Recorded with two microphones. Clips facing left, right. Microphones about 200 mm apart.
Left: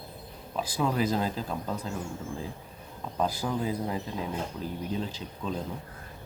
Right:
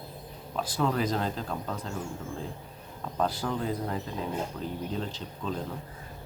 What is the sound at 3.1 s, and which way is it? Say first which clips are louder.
Speech: even; 10° left (ahead or behind).